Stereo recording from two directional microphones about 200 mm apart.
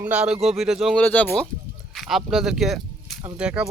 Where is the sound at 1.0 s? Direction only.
10° left (ahead or behind).